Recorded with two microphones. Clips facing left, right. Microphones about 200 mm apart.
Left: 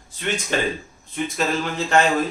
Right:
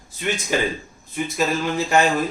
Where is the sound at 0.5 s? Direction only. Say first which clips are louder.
Right 1 dB; 10° right (ahead or behind).